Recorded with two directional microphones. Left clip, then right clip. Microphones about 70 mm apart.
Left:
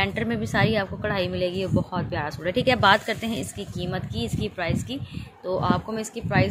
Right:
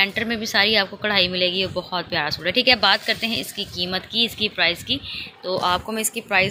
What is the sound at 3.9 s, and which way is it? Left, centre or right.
A woman's voice, centre.